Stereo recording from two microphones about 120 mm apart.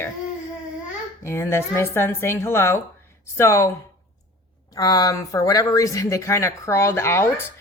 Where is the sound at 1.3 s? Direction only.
20° left (ahead or behind).